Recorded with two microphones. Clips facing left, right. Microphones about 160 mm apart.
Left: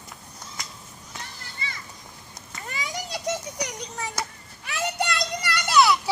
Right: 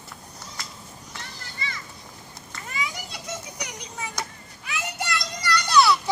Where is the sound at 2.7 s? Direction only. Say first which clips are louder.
Even; 40° left (ahead or behind).